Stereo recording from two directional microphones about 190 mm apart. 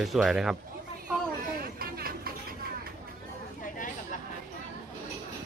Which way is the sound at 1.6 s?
50° right (ahead or behind).